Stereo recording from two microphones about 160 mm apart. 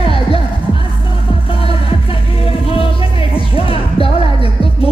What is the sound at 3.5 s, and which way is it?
Music, 35° left (ahead or behind).